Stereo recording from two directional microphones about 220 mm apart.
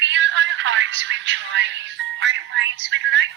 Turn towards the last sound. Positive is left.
turn(degrees=-55)  # may be behind; listen again after turning